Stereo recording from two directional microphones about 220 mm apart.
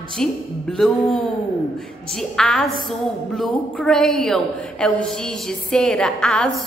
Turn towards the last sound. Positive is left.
turn(degrees=5)  # may be behind; listen again after turning